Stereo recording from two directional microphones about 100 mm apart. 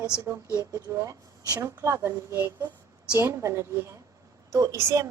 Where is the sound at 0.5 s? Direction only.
35° right (ahead or behind).